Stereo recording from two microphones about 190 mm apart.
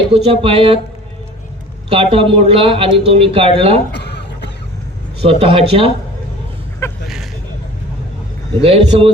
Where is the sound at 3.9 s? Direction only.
65° left (ahead or behind).